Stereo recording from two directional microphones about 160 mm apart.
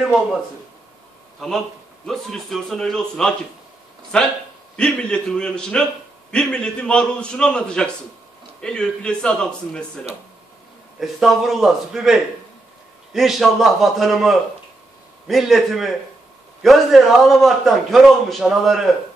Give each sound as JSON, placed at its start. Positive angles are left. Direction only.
{"t": 0.0, "sound": "a man's voice", "side_deg": 0}
{"t": 1.4, "sound": "a man's voice", "side_deg": 0}
{"t": 4.7, "sound": "a man's voice", "side_deg": 5}
{"t": 11.0, "sound": "a man's voice", "side_deg": 0}